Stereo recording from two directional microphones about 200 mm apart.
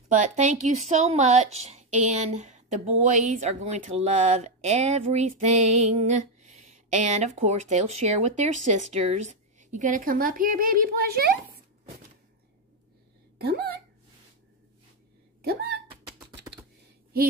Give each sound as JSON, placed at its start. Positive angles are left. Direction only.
{"t": 0.1, "sound": "speech", "side_deg": -35}
{"t": 13.4, "sound": "speech", "side_deg": -55}
{"t": 15.4, "sound": "speech", "side_deg": -50}